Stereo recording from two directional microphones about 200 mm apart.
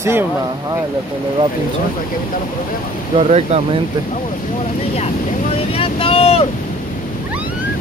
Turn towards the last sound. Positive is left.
turn(degrees=30)  # may be behind; listen again after turning